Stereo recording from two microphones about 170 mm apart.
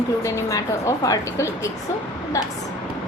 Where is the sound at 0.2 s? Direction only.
20° left (ahead or behind).